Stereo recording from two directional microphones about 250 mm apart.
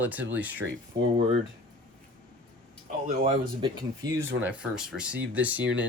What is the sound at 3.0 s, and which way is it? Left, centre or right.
Speech, right.